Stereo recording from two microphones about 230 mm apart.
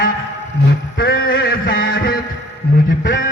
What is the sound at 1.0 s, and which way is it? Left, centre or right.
Music, left.